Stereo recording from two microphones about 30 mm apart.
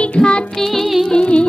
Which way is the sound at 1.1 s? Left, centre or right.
Left.